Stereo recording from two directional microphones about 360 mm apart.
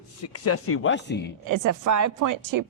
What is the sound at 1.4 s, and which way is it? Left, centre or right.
A woman's voice, right.